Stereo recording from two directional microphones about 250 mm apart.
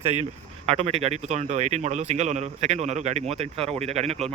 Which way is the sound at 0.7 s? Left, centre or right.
Right.